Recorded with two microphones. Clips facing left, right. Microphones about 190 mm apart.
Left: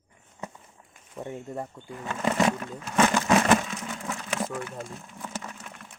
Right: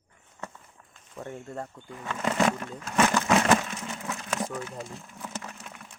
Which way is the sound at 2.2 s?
15° left (ahead or behind).